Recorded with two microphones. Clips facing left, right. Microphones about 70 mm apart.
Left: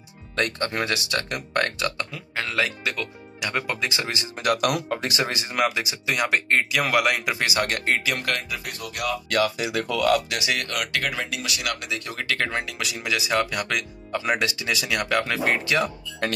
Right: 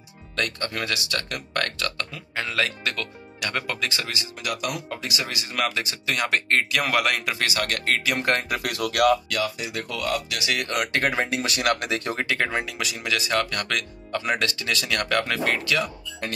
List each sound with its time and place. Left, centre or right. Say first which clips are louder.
0.4 s speech: left 3 dB; left
2.1 s speech: left 1 dB; centre; by 4.3 s left
4.4 s speech: left 8 dB; left
5.5 s speech: even; centre
8.4 s speech: right 4 dB; right
8.6 s speech: right 9 dB; right
9.4 s speech: left 4 dB; left
10.7 s speech: right 3 dB; right
12.3 s speech: left 3 dB; centre; by 15.9 s left